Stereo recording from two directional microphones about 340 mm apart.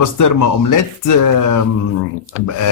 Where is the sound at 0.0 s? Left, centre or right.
Left.